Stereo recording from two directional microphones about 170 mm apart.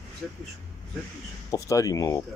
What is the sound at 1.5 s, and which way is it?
Speech, 20° left (ahead or behind).